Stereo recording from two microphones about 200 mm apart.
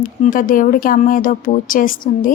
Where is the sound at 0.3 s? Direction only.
45° left (ahead or behind).